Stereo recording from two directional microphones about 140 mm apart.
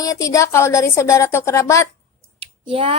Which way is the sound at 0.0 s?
25° left (ahead or behind).